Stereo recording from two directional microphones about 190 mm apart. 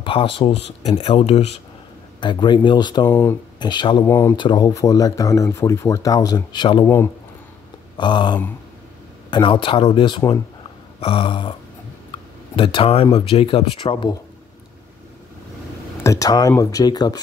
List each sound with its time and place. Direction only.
0.0 s speech: 25° left (ahead or behind)
4.0 s speech: 15° left (ahead or behind)
8.0 s speech: 25° left (ahead or behind)
12.5 s speech: 30° left (ahead or behind)
16.0 s speech: 15° left (ahead or behind)